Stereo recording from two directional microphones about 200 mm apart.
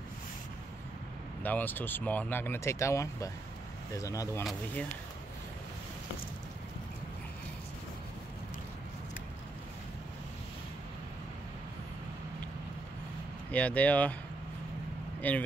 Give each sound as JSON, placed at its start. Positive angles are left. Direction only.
{"t": 1.4, "sound": "speech", "side_deg": 10}
{"t": 13.5, "sound": "speech", "side_deg": 5}
{"t": 15.2, "sound": "speech", "side_deg": 10}